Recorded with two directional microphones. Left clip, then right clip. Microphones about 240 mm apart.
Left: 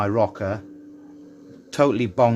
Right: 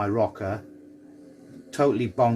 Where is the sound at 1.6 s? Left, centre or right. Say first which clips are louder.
Left 3 dB; left.